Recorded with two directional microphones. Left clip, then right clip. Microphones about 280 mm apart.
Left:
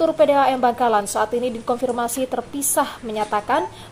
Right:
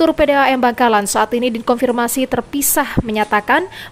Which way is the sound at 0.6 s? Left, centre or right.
Right.